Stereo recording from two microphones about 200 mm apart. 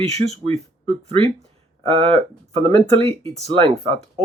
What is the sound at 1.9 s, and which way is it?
Speech, 30° right (ahead or behind).